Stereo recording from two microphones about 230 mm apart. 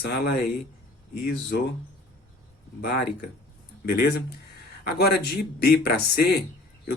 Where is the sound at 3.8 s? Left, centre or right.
Left.